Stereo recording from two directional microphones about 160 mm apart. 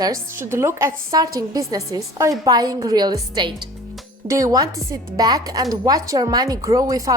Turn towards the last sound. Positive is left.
turn(degrees=-20)  # may be behind; listen again after turning